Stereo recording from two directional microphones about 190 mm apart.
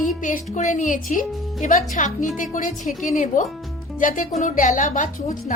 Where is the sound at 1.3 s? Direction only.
Centre (ahead or behind).